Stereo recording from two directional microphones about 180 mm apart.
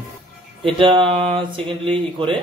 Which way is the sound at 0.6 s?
30° right (ahead or behind).